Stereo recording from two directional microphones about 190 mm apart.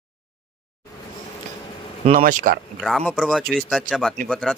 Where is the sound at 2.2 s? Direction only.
45° right (ahead or behind).